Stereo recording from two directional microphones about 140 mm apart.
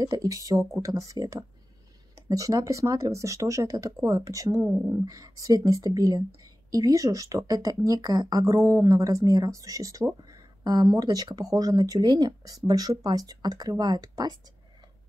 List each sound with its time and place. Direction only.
0.0 s speech: 25° right (ahead or behind)